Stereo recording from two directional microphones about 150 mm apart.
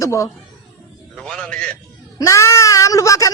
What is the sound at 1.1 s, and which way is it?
Speech, 5° left (ahead or behind).